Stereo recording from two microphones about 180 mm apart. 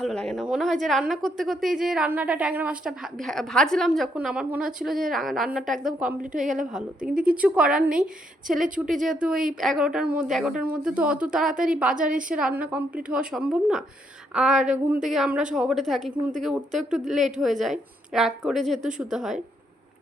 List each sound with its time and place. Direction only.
0.0 s a woman's voice: 5° left (ahead or behind)
6.3 s a woman's voice: 45° right (ahead or behind)
6.7 s a woman's voice: 5° right (ahead or behind)